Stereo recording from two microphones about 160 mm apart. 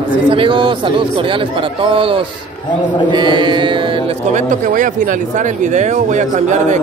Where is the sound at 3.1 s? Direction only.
30° right (ahead or behind).